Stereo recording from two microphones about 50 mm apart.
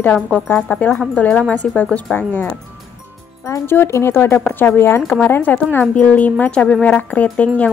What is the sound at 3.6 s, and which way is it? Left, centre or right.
Speech, left.